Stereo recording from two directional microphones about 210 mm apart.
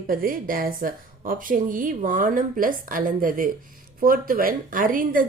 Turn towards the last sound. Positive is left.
turn(degrees=-40)  # may be behind; listen again after turning